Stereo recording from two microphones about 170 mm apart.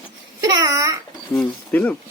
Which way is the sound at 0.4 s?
25° right (ahead or behind).